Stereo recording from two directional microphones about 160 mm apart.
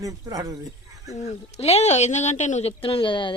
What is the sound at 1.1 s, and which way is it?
Speech, 40° left (ahead or behind).